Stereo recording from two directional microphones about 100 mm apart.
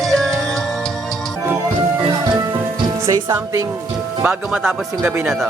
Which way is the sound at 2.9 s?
30° right (ahead or behind).